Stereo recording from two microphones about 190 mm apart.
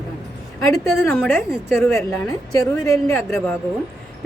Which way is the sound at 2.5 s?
15° left (ahead or behind).